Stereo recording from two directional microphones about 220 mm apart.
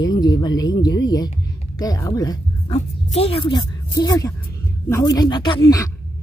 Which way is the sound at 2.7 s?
30° left (ahead or behind).